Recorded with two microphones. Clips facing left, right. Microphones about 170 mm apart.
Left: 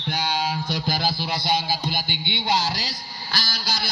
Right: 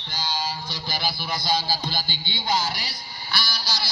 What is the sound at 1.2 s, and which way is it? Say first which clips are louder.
Music: left 2 dB; 25° left (ahead or behind).